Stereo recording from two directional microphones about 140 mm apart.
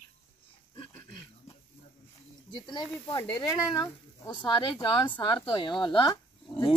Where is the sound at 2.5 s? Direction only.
35° left (ahead or behind).